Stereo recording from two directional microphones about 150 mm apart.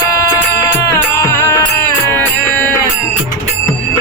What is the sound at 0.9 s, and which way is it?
Music, 15° left (ahead or behind).